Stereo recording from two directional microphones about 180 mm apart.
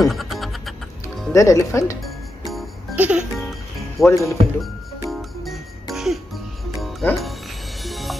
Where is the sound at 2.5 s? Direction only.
Centre (ahead or behind).